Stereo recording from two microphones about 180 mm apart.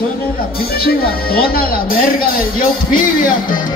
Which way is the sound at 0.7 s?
55° left (ahead or behind).